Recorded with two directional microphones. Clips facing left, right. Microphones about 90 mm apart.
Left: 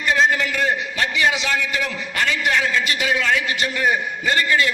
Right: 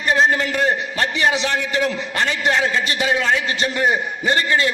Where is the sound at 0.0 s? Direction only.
35° right (ahead or behind).